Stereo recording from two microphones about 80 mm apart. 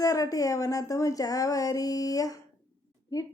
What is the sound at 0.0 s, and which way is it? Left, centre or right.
Speech, left.